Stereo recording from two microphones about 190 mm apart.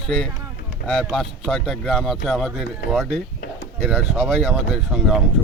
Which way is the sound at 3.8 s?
5° right (ahead or behind).